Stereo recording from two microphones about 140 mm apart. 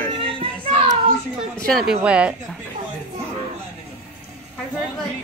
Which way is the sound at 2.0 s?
10° right (ahead or behind).